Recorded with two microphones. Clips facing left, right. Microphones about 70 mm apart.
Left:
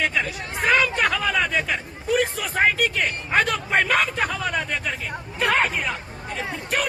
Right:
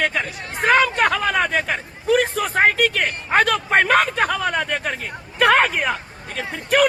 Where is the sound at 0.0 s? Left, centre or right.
Right.